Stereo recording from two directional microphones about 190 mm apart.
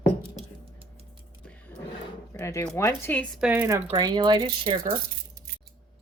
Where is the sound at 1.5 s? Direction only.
10° left (ahead or behind).